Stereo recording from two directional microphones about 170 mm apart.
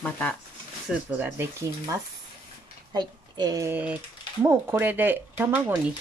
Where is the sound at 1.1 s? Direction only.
10° right (ahead or behind).